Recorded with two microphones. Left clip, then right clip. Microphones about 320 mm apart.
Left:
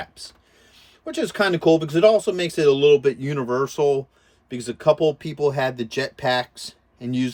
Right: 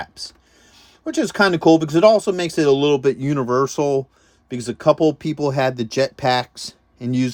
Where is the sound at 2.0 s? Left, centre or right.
Centre.